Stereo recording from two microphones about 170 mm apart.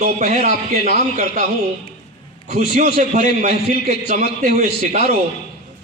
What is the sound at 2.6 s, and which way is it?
A man's voice, 55° right (ahead or behind).